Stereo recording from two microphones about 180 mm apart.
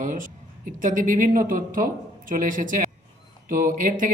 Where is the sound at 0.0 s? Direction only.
45° right (ahead or behind).